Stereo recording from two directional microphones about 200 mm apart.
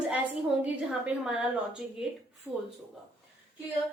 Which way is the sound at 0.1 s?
5° right (ahead or behind).